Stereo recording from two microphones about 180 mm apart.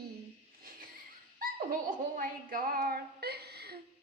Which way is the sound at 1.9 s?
50° right (ahead or behind).